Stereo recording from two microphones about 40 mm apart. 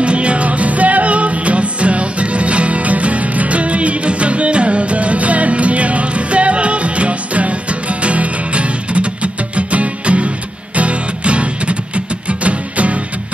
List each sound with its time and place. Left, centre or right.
0.0 s music: right